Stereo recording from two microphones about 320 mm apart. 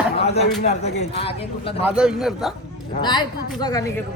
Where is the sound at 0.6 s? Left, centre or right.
Left.